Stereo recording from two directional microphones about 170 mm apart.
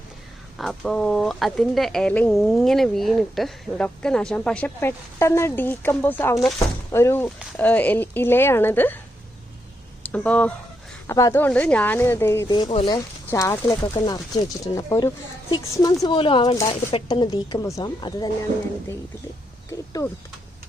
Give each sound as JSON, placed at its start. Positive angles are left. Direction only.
{"t": 0.6, "sound": "speech", "side_deg": 0}
{"t": 10.0, "sound": "speech", "side_deg": 10}
{"t": 12.5, "sound": "speech", "side_deg": 35}
{"t": 12.9, "sound": "speech", "side_deg": 20}